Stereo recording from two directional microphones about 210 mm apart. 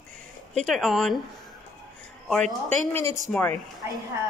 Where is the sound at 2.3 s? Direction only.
5° left (ahead or behind).